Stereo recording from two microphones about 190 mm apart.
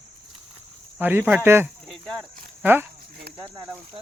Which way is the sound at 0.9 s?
10° right (ahead or behind).